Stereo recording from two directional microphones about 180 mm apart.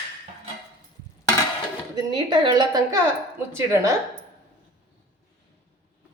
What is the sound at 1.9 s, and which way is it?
A woman's voice, 25° right (ahead or behind).